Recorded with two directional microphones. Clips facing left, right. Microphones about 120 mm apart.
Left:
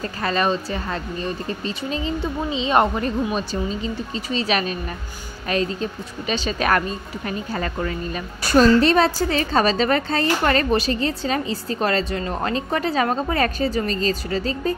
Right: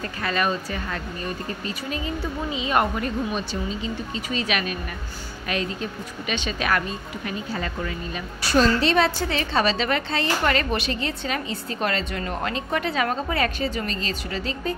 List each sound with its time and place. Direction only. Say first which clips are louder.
0.2 s a woman's voice: left 3 dB; 30° left (ahead or behind)
4.3 s a woman's voice: left 4 dB; 30° left (ahead or behind)